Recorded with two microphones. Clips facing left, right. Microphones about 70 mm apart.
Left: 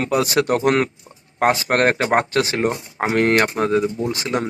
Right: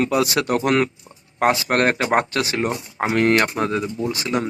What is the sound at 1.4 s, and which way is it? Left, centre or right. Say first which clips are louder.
Speech: left 1 dB; left.